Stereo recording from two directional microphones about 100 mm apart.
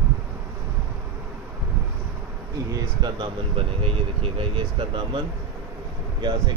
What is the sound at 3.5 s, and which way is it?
Speech, 70° right (ahead or behind).